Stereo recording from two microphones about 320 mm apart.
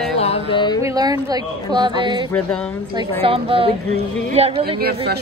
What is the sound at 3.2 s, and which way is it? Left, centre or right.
A woman's voice, centre.